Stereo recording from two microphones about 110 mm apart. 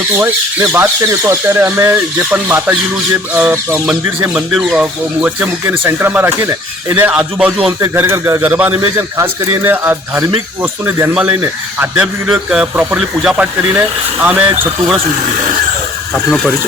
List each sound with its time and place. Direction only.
0.2 s speech: 25° right (ahead or behind)
7.1 s speech: 10° right (ahead or behind)
7.9 s speech: 20° right (ahead or behind)